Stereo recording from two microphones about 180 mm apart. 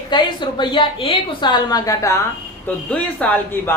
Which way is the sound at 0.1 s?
25° left (ahead or behind).